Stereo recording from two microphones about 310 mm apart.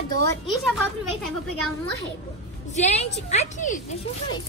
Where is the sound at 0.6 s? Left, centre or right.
Centre.